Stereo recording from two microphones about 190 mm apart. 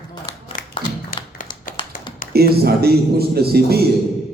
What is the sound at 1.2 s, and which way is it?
Tap, 25° left (ahead or behind).